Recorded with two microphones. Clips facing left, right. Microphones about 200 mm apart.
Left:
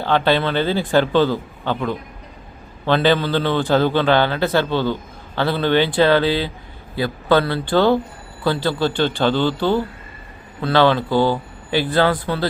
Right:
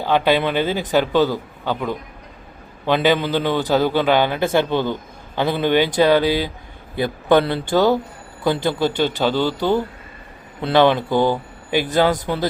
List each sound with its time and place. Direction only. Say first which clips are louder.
0.0 s a man's voice: even; 10° right (ahead or behind)